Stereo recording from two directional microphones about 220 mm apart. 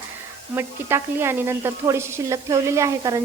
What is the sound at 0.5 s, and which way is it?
A woman's voice, 10° right (ahead or behind).